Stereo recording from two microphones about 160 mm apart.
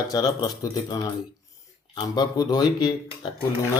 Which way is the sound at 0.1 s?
25° left (ahead or behind).